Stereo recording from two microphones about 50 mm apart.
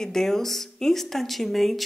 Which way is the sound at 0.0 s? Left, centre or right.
Centre.